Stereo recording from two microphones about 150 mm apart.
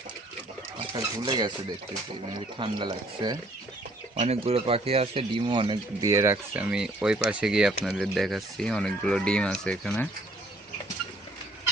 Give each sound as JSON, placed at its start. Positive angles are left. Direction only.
{"t": 0.9, "sound": "speech", "side_deg": -30}
{"t": 2.6, "sound": "speech", "side_deg": -30}
{"t": 4.1, "sound": "speech", "side_deg": -45}